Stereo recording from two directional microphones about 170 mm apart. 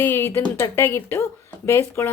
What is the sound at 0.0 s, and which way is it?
A woman's voice, 15° left (ahead or behind).